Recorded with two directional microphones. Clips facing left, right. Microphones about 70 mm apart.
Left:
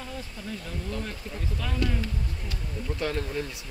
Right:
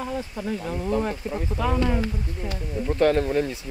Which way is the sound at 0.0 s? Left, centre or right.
Right.